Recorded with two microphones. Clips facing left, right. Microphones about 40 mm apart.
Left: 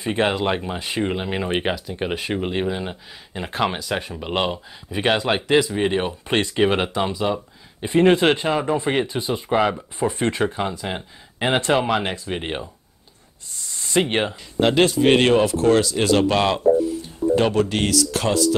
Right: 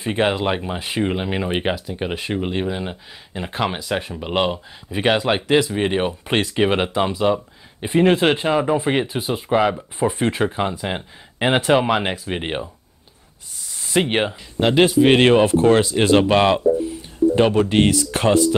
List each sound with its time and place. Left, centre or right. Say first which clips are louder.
0.0 s speech: right 1 dB; centre
7.1 s speech: right 4 dB; centre
8.0 s speech: even; centre
13.7 s speech: right 1 dB; centre
15.2 s speech: right 3 dB; right